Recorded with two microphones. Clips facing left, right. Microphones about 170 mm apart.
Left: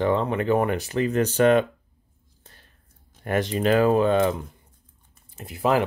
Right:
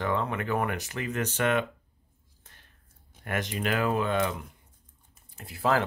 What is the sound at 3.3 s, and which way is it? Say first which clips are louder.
Speech: left 8 dB; 30° left (ahead or behind).